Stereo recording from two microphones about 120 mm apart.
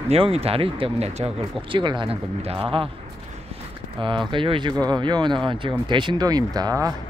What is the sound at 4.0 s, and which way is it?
Speech, 45° right (ahead or behind).